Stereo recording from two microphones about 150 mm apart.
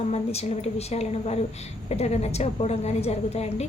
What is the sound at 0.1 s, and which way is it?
A woman's voice, 45° left (ahead or behind).